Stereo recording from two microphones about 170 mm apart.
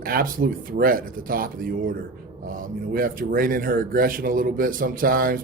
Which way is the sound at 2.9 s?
55° right (ahead or behind).